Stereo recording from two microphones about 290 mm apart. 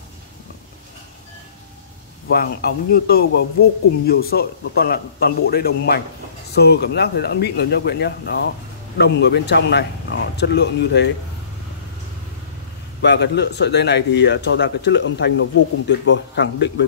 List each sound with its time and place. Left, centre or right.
2.3 s speech: left
13.0 s speech: left